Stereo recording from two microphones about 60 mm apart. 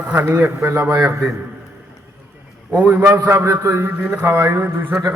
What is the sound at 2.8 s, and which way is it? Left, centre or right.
Speech, right.